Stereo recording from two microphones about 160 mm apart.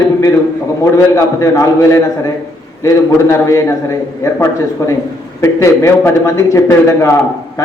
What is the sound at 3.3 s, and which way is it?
Speech, 15° left (ahead or behind).